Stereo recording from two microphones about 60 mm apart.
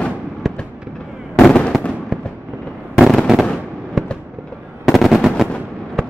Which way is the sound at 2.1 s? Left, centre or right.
Centre.